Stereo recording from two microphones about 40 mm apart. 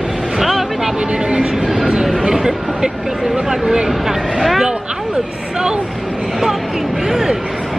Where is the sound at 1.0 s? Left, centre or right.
Right.